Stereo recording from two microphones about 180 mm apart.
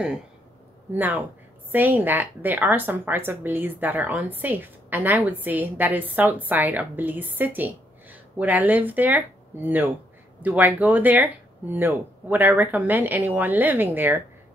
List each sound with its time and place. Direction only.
0.9 s a woman's voice: 10° right (ahead or behind)